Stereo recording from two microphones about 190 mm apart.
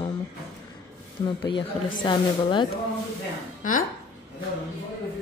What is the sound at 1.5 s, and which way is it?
A woman's voice, 25° left (ahead or behind).